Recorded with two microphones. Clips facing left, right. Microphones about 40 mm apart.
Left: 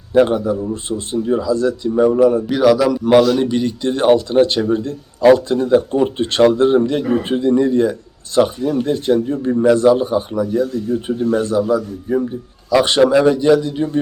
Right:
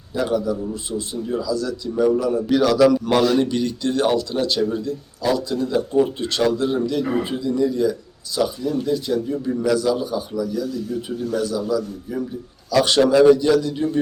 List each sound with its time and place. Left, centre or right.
0.1 s speech: left
2.5 s speech: centre; by 12.3 s left
12.7 s a man's voice: left